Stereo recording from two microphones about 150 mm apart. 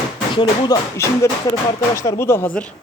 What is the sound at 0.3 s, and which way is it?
Speech, 30° left (ahead or behind).